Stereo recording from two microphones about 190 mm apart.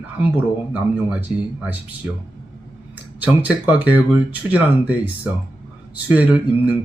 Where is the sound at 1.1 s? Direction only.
5° right (ahead or behind).